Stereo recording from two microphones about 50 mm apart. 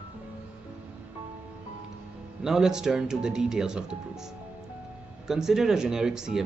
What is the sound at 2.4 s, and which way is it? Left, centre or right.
Speech, centre.